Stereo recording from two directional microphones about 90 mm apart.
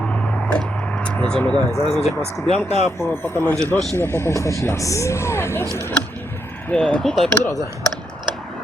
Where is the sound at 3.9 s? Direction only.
30° left (ahead or behind).